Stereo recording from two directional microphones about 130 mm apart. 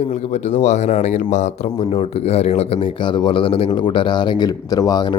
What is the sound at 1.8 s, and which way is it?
Speech, 50° left (ahead or behind).